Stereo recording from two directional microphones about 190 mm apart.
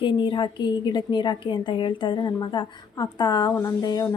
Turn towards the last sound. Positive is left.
turn(degrees=20)  # may be behind; listen again after turning